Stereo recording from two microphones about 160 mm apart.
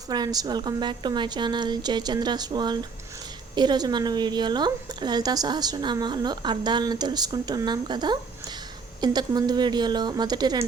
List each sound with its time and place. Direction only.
0.1 s a woman's voice: 25° right (ahead or behind)